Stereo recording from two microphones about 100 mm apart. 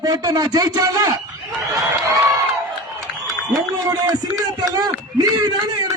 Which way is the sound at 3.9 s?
40° right (ahead or behind).